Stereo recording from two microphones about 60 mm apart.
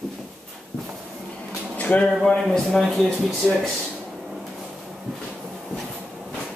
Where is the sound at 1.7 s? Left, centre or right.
Left.